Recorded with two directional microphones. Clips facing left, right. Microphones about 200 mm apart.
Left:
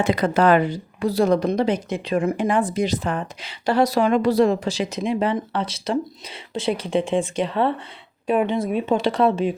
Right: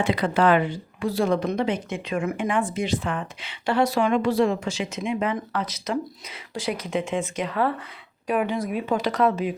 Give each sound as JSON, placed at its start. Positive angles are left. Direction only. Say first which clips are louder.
{"t": 0.0, "sound": "speech", "louder": "left 3 dB", "side_deg": 45}